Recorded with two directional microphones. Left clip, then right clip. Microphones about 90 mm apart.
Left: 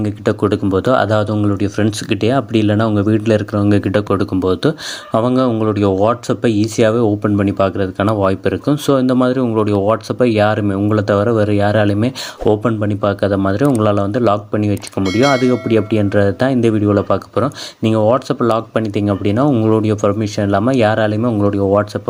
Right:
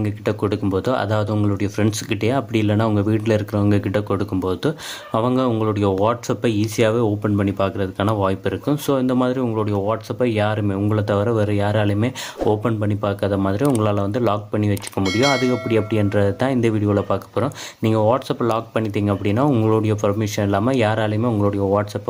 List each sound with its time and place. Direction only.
0.0 s speech: 30° left (ahead or behind)
9.6 s speech: 50° left (ahead or behind)
10.7 s speech: 35° left (ahead or behind)
15.0 s speech: centre (ahead or behind)
15.6 s speech: 30° left (ahead or behind)